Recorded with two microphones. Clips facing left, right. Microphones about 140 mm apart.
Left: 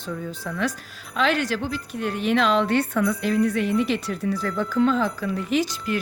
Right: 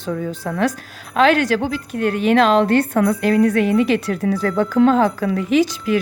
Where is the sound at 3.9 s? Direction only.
65° right (ahead or behind); by 6.0 s 90° right.